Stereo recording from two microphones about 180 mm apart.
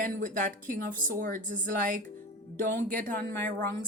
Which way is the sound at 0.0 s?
50° right (ahead or behind).